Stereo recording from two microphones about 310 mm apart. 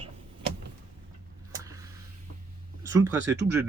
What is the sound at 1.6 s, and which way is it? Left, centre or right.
Vehicle, centre.